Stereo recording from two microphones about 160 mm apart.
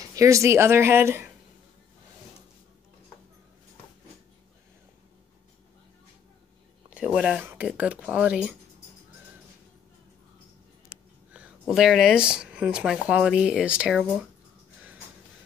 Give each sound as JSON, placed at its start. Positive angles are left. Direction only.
{"t": 0.1, "sound": "speech", "side_deg": -20}
{"t": 7.1, "sound": "speech", "side_deg": 0}
{"t": 11.3, "sound": "speech", "side_deg": -5}